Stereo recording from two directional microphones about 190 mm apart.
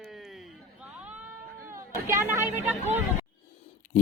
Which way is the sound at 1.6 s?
15° right (ahead or behind).